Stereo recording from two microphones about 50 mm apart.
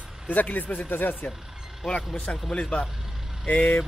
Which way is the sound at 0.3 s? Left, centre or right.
Left.